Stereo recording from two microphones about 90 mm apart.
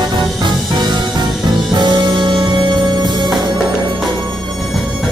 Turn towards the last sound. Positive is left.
turn(degrees=-55)  # may be behind; listen again after turning